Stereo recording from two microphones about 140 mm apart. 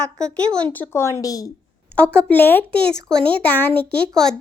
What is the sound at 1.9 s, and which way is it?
A child's voice, 10° left (ahead or behind).